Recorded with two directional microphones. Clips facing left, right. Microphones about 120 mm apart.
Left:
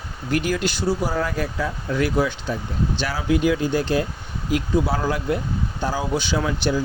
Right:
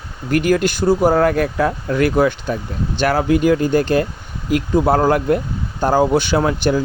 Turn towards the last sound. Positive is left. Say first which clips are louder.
# right 6 dB
turn(degrees=-55)  # may be behind; listen again after turning